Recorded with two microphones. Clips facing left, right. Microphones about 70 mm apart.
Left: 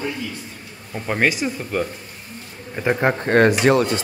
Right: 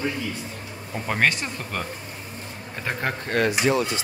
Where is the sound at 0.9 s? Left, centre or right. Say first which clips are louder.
Left 3 dB; centre.